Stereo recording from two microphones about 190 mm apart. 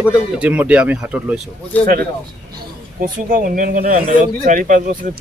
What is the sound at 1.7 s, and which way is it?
Speech, 10° left (ahead or behind).